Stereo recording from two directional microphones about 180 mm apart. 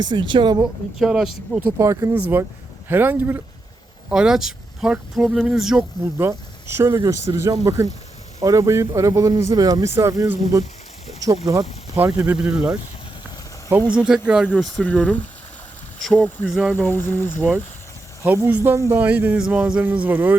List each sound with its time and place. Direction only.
0.0 s speech: 25° right (ahead or behind)
0.6 s speech: 5° right (ahead or behind)
1.8 s speech: 15° right (ahead or behind)
6.0 s speech: 15° right (ahead or behind)
14.4 s speech: 5° left (ahead or behind)
18.2 s speech: 10° right (ahead or behind)